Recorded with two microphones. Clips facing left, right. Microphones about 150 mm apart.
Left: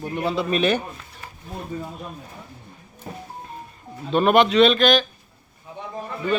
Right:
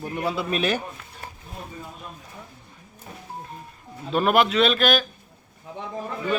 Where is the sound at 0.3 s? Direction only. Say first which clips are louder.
Left 4 dB; 10° right (ahead or behind).